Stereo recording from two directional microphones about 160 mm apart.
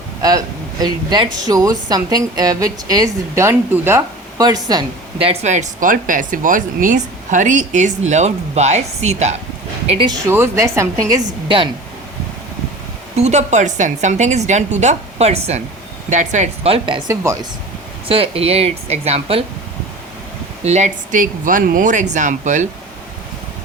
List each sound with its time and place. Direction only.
0.2 s a woman's voice: 25° right (ahead or behind)
4.4 s speech: 25° right (ahead or behind)
10.1 s a woman's voice: 15° right (ahead or behind)
11.4 s speech: 30° right (ahead or behind)
13.1 s speech: 45° right (ahead or behind); by 17.3 s 25° right (ahead or behind)
18.1 s speech: 35° right (ahead or behind)
20.7 s speech: 45° right (ahead or behind)